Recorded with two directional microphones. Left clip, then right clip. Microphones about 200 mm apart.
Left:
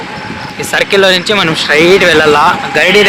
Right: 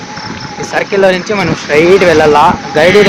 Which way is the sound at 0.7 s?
Centre (ahead or behind).